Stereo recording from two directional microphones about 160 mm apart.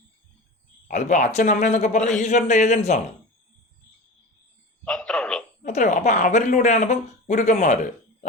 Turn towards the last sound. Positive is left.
turn(degrees=50)  # may be behind; listen again after turning